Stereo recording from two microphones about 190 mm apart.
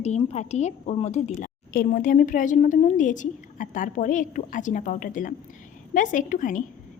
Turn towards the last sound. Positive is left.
turn(degrees=45)  # may be behind; listen again after turning